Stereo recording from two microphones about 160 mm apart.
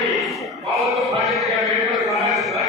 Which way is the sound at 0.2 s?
Centre (ahead or behind).